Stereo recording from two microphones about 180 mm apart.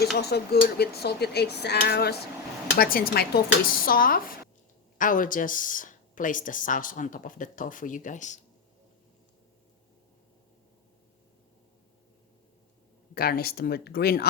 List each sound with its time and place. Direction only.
0.0 s speech: 65° left (ahead or behind); by 8.4 s 45° left (ahead or behind)
13.1 s speech: 55° left (ahead or behind)